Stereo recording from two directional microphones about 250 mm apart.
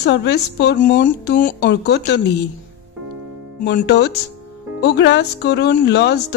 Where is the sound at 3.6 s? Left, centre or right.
Left.